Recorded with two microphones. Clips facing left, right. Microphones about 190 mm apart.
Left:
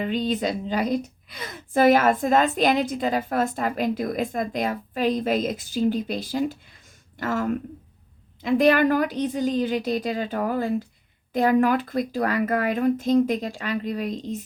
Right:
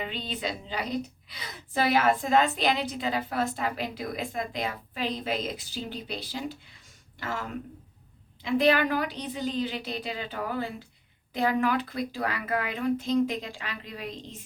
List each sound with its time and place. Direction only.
0.0 s a woman's voice: 45° left (ahead or behind)